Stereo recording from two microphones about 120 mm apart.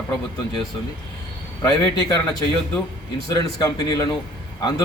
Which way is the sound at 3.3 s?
30° left (ahead or behind).